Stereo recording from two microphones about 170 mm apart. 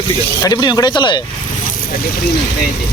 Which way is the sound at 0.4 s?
25° left (ahead or behind).